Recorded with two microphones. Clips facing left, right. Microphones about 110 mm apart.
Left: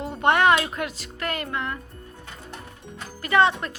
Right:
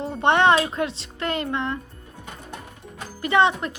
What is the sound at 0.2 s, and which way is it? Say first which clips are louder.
Speech: right 1 dB; 25° right (ahead or behind).